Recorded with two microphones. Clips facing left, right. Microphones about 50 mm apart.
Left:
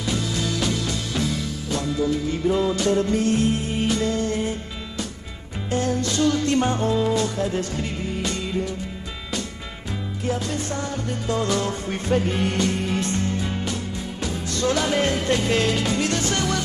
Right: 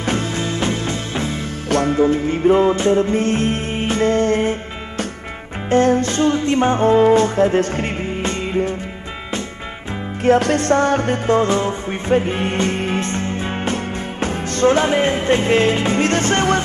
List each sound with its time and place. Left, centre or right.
0.0 s music: right
1.7 s music: right
10.2 s music: right
11.3 s music: right